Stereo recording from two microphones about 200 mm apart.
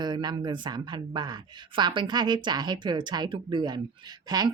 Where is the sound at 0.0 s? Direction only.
20° right (ahead or behind).